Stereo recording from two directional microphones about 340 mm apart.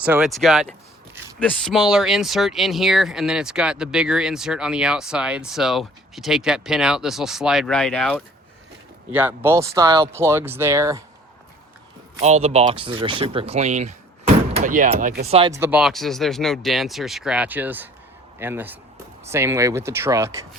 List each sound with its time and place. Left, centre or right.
0.0 s speech: centre
12.1 s speech: centre